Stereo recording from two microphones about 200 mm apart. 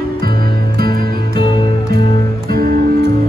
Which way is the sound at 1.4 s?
25° left (ahead or behind).